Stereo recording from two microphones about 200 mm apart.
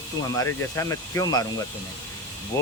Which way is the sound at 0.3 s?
15° left (ahead or behind).